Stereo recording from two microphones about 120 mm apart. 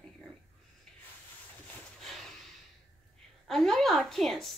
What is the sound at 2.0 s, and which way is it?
Snort, centre (ahead or behind).